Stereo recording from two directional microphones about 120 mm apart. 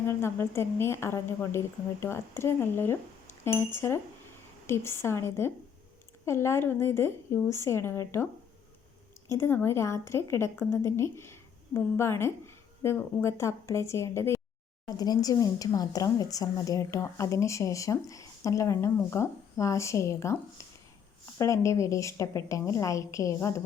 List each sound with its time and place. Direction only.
0.1 s speech: 20° left (ahead or behind)
9.3 s speech: 20° left (ahead or behind)